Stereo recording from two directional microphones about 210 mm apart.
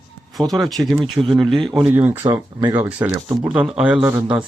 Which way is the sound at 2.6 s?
20° right (ahead or behind).